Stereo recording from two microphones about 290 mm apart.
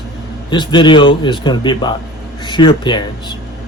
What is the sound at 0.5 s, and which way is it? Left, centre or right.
Speech, centre.